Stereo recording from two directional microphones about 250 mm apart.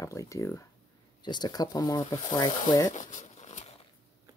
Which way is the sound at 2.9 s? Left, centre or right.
Left.